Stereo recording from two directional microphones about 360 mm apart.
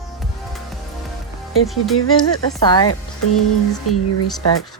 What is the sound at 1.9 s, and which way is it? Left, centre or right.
Speech, left.